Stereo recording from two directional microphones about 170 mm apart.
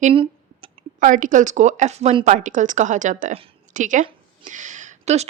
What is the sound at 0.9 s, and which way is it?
Speech, 50° right (ahead or behind).